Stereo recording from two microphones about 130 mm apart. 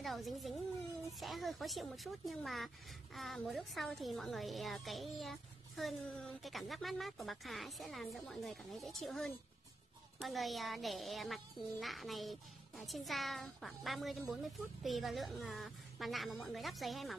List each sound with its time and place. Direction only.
0.0 s a child's voice: centre (ahead or behind)